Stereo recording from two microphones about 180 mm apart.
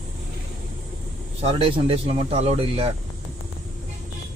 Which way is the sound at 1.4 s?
30° right (ahead or behind).